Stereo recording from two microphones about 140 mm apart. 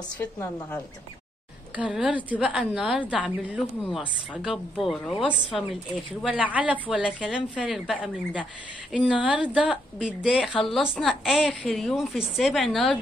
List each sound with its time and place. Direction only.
0.2 s a woman's voice: 15° left (ahead or behind)
1.8 s a woman's voice: 10° right (ahead or behind)
10.4 s a woman's voice: 5° left (ahead or behind)